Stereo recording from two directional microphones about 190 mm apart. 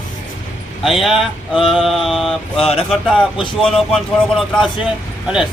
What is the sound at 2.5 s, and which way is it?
Speech, 30° left (ahead or behind).